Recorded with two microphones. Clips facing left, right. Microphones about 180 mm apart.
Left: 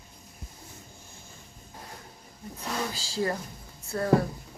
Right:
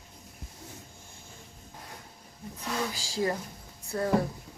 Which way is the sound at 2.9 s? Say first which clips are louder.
Even; 15° right (ahead or behind).